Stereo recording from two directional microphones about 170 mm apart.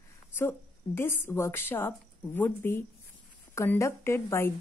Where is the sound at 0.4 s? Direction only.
15° left (ahead or behind).